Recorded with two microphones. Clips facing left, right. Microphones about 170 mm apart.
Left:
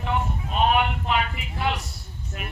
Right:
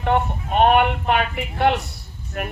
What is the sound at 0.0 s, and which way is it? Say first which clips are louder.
A woman's voice: right 6 dB; 60° right (ahead or behind).